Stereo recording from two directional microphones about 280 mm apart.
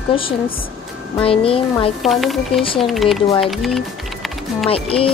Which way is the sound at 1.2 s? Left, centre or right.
Centre.